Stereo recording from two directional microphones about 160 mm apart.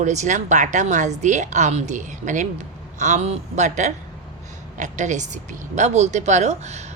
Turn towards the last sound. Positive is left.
turn(degrees=-45)  # may be behind; listen again after turning